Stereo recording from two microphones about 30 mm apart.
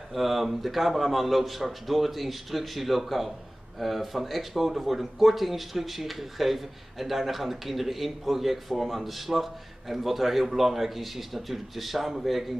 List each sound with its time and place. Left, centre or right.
0.1 s speech: centre